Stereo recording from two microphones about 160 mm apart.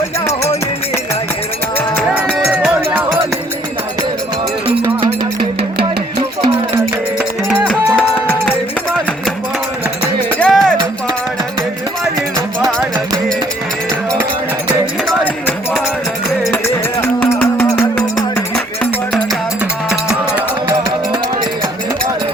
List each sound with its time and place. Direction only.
4.8 s music: 30° right (ahead or behind)
7.7 s music: 5° left (ahead or behind)
10.4 s music: 5° left (ahead or behind)
15.2 s a sound: 10° left (ahead or behind)
16.5 s music: 15° left (ahead or behind)
20.3 s music: 30° right (ahead or behind)